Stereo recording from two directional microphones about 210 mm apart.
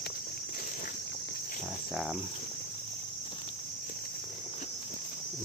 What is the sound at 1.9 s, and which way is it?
Cricket, centre (ahead or behind).